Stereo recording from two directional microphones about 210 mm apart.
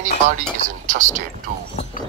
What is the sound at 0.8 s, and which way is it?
Speech, 35° right (ahead or behind).